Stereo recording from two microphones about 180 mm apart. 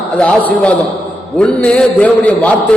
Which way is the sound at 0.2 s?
5° left (ahead or behind).